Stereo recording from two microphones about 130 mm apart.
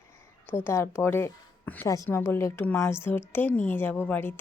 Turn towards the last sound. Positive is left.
turn(degrees=15)  # may be behind; listen again after turning